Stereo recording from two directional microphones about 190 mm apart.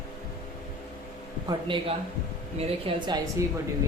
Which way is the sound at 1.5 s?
25° right (ahead or behind).